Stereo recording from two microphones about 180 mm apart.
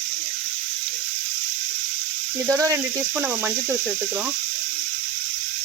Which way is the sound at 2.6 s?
20° right (ahead or behind).